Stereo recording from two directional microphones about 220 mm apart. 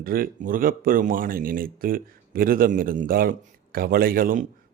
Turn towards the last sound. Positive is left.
turn(degrees=-40)  # may be behind; listen again after turning